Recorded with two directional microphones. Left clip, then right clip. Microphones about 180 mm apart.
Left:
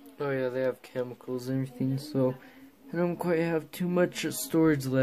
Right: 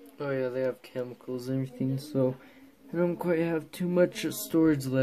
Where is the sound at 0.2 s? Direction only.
15° left (ahead or behind).